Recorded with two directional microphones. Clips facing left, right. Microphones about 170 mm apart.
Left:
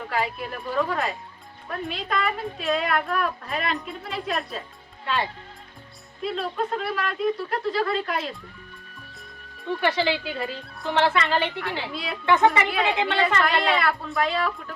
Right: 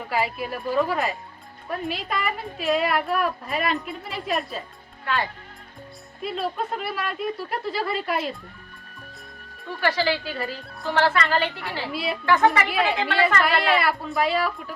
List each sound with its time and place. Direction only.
0.1 s a woman's voice: 5° right (ahead or behind)
5.0 s a woman's voice: 25° left (ahead or behind)
6.2 s a woman's voice: 5° right (ahead or behind)
9.8 s a woman's voice: 20° left (ahead or behind)
10.6 s music: centre (ahead or behind)
10.8 s a woman's voice: 20° left (ahead or behind)
11.9 s a woman's voice: 5° right (ahead or behind)
12.2 s a woman's voice: 20° left (ahead or behind)
13.4 s a woman's voice: 5° right (ahead or behind)